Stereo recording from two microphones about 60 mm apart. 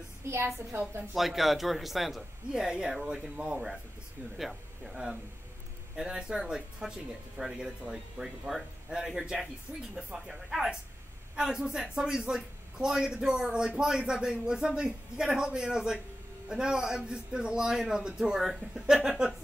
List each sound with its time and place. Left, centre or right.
0.3 s a woman's voice: right
1.1 s a man's voice: centre